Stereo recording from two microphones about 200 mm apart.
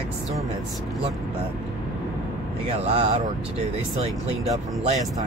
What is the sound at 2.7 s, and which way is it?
Speech, 30° right (ahead or behind).